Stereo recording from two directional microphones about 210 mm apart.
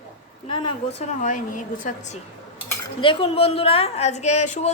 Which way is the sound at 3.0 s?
25° left (ahead or behind).